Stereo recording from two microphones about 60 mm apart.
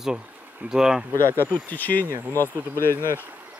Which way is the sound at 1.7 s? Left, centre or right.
Left.